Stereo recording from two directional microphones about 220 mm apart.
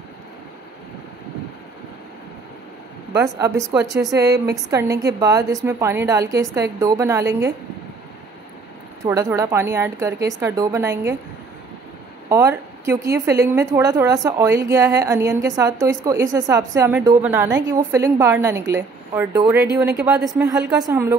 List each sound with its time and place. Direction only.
3.1 s a woman's voice: 15° right (ahead or behind)
4.2 s a woman's voice: 50° right (ahead or behind)
4.6 s a woman's voice: 15° right (ahead or behind)
9.0 s a woman's voice: 15° right (ahead or behind)
12.3 s a woman's voice: 10° right (ahead or behind)